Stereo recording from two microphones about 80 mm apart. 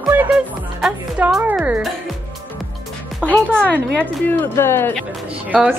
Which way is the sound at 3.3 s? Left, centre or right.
Centre.